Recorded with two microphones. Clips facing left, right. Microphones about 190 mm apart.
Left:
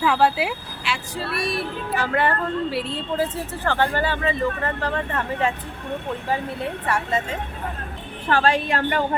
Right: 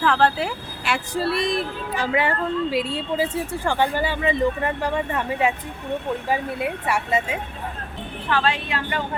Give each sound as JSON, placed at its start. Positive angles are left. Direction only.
{"t": 0.0, "sound": "speech", "side_deg": 5}
{"t": 0.9, "sound": "speech", "side_deg": -55}
{"t": 1.2, "sound": "speech", "side_deg": -25}
{"t": 8.3, "sound": "a woman's voice", "side_deg": 45}